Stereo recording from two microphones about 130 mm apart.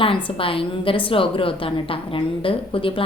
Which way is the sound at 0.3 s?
45° left (ahead or behind).